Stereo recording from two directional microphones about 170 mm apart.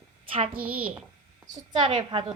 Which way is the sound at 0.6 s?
10° right (ahead or behind).